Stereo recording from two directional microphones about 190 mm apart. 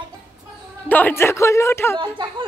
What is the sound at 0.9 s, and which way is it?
Speech, 10° left (ahead or behind).